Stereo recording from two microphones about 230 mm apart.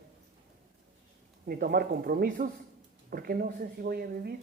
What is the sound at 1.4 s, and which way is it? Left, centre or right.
Speech, right.